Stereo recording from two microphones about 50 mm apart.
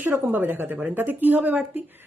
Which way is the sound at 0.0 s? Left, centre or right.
Right.